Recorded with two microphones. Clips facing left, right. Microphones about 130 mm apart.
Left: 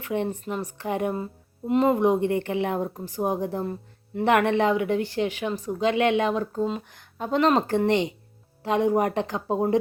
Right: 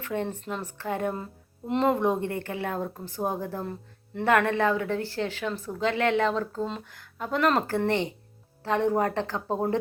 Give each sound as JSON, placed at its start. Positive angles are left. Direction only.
{"t": 0.0, "sound": "speech", "side_deg": 15}
{"t": 1.1, "sound": "speech", "side_deg": 5}
{"t": 2.0, "sound": "speech", "side_deg": 15}
{"t": 4.3, "sound": "speech", "side_deg": 20}